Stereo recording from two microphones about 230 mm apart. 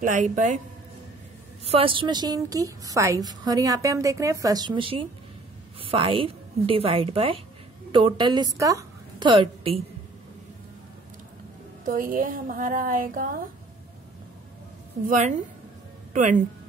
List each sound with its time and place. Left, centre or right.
0.0 s a woman's voice: right
1.7 s a woman's voice: right
11.8 s a woman's voice: right
15.0 s a woman's voice: right